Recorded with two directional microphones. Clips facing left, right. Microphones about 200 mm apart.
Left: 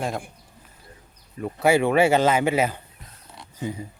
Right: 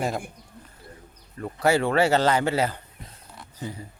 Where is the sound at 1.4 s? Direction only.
10° left (ahead or behind).